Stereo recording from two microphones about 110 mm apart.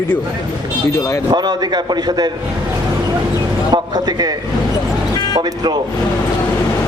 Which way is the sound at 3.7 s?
35° right (ahead or behind).